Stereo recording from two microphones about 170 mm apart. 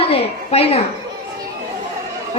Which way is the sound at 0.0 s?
35° left (ahead or behind).